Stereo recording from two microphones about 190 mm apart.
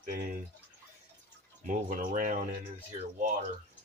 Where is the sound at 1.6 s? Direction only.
45° right (ahead or behind).